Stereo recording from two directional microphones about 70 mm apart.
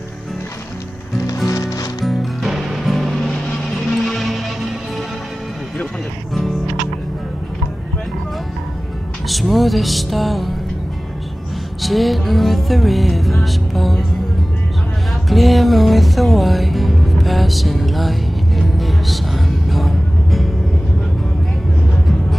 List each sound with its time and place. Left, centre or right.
1.2 s music: left
2.0 s music: centre
9.3 s music: centre
11.8 s music: centre
15.2 s music: centre